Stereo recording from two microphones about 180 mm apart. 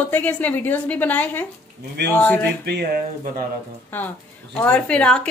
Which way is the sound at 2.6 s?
60° right (ahead or behind).